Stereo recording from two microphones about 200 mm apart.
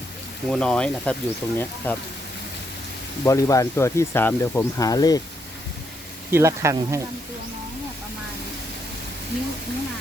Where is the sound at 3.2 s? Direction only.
15° left (ahead or behind).